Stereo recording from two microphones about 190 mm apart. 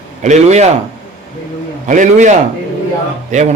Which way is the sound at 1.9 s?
40° right (ahead or behind).